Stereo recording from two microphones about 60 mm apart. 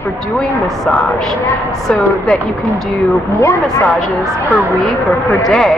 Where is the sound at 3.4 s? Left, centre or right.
Left.